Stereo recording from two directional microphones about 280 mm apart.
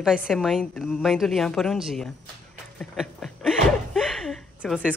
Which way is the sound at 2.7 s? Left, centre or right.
Centre.